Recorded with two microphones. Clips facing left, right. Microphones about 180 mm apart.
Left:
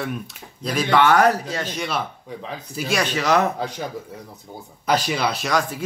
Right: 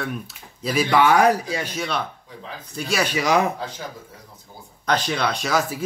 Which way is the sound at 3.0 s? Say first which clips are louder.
Even; 10° right (ahead or behind).